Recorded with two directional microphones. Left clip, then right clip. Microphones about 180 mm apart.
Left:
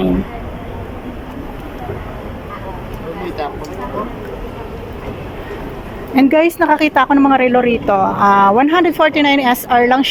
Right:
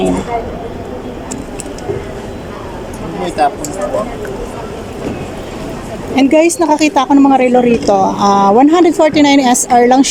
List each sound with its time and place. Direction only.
3.4 s speech: 90° right
6.1 s a woman's voice: 15° right (ahead or behind)